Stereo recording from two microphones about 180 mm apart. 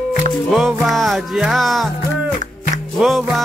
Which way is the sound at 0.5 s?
Centre (ahead or behind).